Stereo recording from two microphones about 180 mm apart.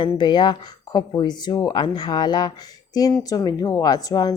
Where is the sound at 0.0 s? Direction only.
25° left (ahead or behind).